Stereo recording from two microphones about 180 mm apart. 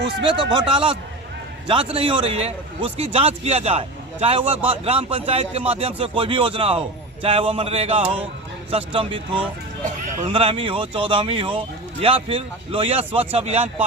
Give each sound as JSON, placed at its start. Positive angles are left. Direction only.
{"t": 0.0, "sound": "a man's voice", "side_deg": -25}
{"t": 4.4, "sound": "speech", "side_deg": -10}
{"t": 4.9, "sound": "a man's voice", "side_deg": -30}